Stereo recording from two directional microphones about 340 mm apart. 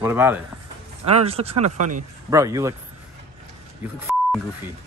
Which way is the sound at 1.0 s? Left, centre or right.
Centre.